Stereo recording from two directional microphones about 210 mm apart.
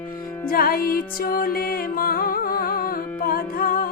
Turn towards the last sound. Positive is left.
turn(degrees=45)  # may be behind; listen again after turning